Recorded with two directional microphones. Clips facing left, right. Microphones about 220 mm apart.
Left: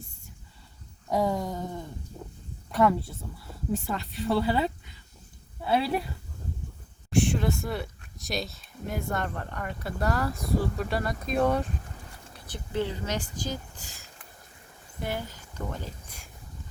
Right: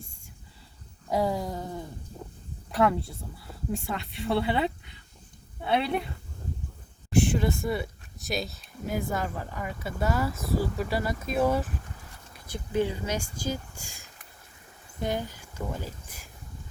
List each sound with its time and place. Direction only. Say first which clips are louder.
1.1 s a sound: even; centre (ahead or behind)
2.7 s speech: left 1 dB; centre (ahead or behind)
7.1 s speech: right 1 dB; centre (ahead or behind)